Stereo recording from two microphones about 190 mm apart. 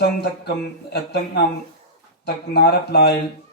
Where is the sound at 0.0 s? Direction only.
55° left (ahead or behind).